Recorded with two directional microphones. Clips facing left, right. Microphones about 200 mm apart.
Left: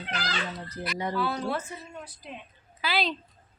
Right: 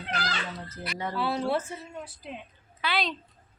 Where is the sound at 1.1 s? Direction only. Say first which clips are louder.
Right 3 dB; 25° right (ahead or behind).